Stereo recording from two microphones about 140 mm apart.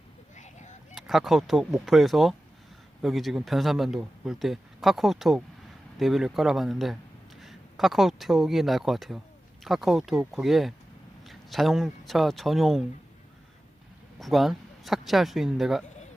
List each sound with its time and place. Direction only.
0.3 s a sound: 60° left (ahead or behind)
0.9 s speech: centre (ahead or behind)
14.2 s speech: centre (ahead or behind)